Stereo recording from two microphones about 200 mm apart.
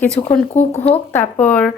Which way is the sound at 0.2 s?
20° left (ahead or behind).